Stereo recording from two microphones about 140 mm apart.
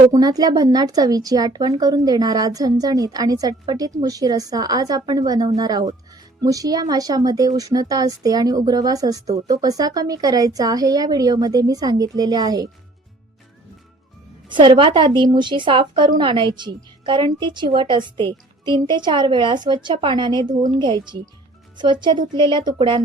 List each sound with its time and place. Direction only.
0.1 s speech: 30° right (ahead or behind)
14.4 s a woman's voice: 35° right (ahead or behind)
22.3 s a woman's voice: 35° right (ahead or behind)